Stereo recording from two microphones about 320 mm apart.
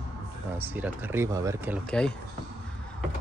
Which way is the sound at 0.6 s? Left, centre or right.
Centre.